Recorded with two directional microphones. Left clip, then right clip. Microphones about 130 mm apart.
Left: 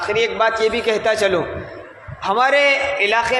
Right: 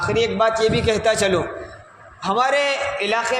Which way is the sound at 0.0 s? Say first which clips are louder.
Left 1 dB; 30° right (ahead or behind).